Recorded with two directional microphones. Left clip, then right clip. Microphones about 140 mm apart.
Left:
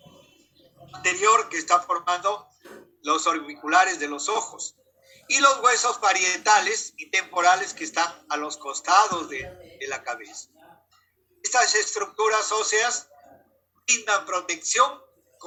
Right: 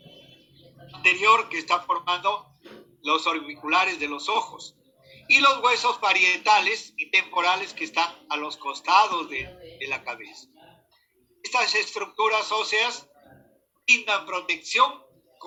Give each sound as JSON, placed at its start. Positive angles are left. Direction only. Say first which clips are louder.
{"t": 0.9, "sound": "speech", "louder": "right 2 dB", "side_deg": 70}